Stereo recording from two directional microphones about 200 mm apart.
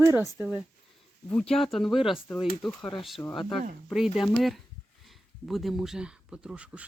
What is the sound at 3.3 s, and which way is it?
Speech, 25° left (ahead or behind).